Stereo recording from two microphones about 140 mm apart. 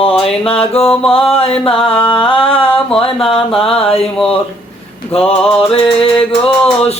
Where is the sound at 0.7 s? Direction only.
45° left (ahead or behind).